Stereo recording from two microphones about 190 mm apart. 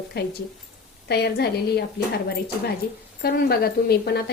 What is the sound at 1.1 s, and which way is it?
Speech, 60° left (ahead or behind).